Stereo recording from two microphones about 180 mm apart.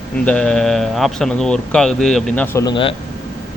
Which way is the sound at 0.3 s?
5° left (ahead or behind).